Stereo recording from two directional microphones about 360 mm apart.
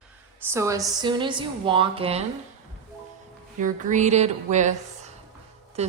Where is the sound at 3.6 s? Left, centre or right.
Right.